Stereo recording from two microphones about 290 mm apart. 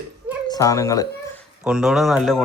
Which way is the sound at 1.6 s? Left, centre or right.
Centre.